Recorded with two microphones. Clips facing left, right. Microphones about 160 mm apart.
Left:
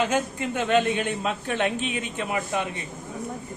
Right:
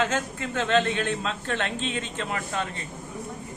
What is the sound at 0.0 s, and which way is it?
Speech, 15° left (ahead or behind).